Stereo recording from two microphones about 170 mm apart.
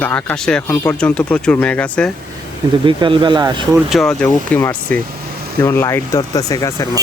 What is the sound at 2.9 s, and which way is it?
Speech, 30° right (ahead or behind).